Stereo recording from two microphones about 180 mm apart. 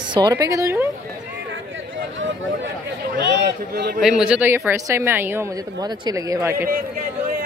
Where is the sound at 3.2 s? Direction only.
70° right (ahead or behind).